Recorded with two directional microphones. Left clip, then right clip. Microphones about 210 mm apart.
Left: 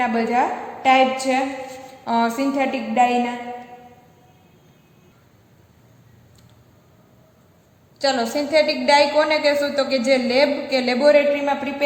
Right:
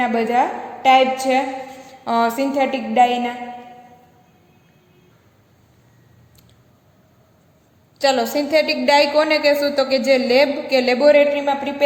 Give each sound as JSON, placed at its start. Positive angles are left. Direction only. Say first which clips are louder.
{"t": 0.0, "sound": "a woman's voice", "louder": "right 2 dB", "side_deg": -30}
{"t": 7.9, "sound": "a woman's voice", "louder": "right 3 dB", "side_deg": -30}